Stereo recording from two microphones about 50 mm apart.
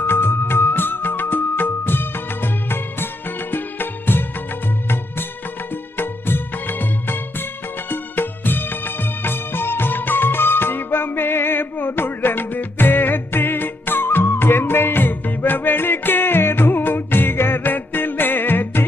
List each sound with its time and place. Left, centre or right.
0.0 s music: left
6.0 s music: left